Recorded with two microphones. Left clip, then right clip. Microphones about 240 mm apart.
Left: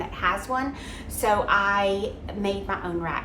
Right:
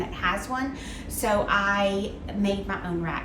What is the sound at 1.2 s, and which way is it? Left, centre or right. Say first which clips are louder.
A woman's voice: left 2 dB; left.